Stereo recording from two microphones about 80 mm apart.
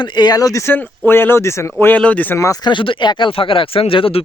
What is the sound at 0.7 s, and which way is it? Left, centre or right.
Speech, left.